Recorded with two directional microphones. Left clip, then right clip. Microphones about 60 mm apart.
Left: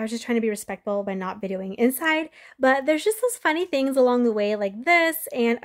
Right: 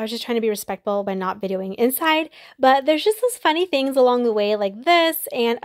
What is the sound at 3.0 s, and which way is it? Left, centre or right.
Speech, centre.